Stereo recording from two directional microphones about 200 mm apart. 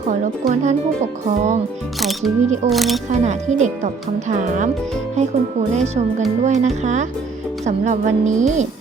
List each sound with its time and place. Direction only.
0.1 s speech: 40° right (ahead or behind)
2.0 s speech: centre (ahead or behind)
3.1 s speech: 35° right (ahead or behind)
5.7 s speech: 35° right (ahead or behind)